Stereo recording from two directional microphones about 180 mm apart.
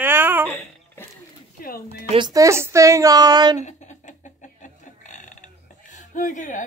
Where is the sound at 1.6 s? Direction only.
55° left (ahead or behind).